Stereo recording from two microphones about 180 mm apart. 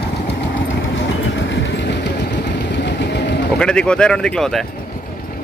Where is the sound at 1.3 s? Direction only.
80° left.